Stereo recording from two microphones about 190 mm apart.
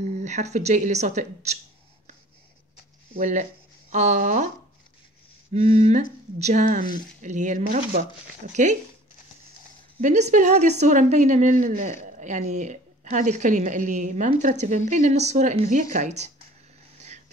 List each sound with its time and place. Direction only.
0.0 s a woman's voice: 40° right (ahead or behind)
3.9 s a woman's voice: 40° right (ahead or behind)
5.5 s a woman's voice: 35° right (ahead or behind)
9.9 s a woman's voice: 40° right (ahead or behind)